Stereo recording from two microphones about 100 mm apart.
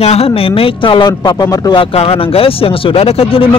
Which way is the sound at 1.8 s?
75° left (ahead or behind).